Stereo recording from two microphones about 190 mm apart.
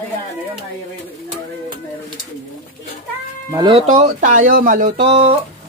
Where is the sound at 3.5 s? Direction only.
30° right (ahead or behind).